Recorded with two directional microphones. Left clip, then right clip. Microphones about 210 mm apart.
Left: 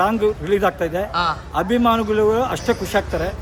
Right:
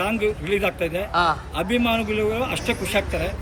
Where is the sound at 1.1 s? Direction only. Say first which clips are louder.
Right 3 dB; centre (ahead or behind).